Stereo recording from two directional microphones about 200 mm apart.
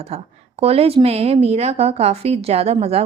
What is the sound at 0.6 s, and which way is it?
A woman's voice, 30° right (ahead or behind).